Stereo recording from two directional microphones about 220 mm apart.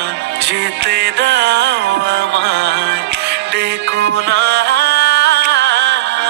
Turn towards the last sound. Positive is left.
turn(degrees=-50)  # may be behind; listen again after turning